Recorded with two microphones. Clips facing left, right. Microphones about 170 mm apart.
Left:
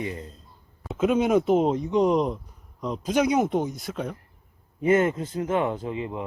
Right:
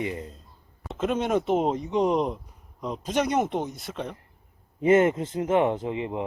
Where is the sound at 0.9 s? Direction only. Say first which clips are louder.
Left 4 dB; centre (ahead or behind).